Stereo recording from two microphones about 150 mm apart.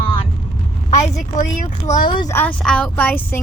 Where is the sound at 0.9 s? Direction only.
50° left (ahead or behind).